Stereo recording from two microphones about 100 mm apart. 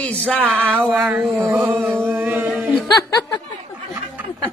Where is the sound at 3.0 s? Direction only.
40° left (ahead or behind).